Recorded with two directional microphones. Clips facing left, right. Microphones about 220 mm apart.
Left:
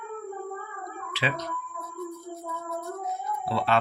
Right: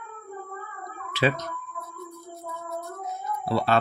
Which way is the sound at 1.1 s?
45° right (ahead or behind).